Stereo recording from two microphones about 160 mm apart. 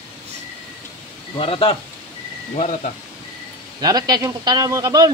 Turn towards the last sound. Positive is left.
turn(degrees=-20)  # may be behind; listen again after turning